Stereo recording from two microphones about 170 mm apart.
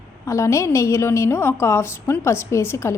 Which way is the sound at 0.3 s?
20° left (ahead or behind).